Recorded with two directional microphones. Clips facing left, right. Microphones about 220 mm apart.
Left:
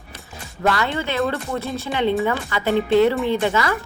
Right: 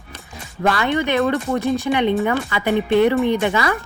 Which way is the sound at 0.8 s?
15° right (ahead or behind).